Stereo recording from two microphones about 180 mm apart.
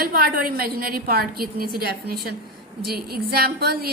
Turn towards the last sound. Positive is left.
turn(degrees=-60)  # may be behind; listen again after turning